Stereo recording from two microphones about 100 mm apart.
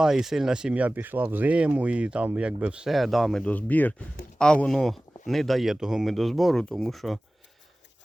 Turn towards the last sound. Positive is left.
turn(degrees=0)  # may be behind; listen again after turning